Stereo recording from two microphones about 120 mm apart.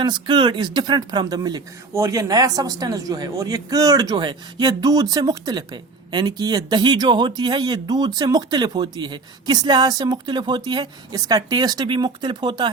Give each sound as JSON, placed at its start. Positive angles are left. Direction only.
{"t": 0.0, "sound": "speech", "side_deg": -40}